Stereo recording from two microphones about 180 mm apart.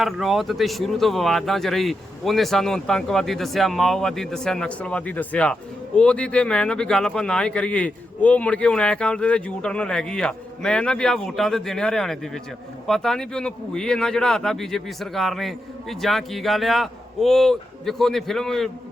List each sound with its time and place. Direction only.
0.0 s speech: centre (ahead or behind)